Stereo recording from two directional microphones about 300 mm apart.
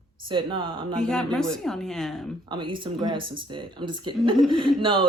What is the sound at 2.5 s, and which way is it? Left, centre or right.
Speech, centre.